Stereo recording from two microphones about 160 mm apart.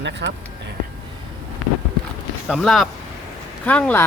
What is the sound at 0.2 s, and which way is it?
Speech, 90° right.